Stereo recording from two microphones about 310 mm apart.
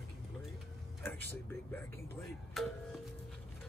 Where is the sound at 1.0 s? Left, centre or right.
Centre.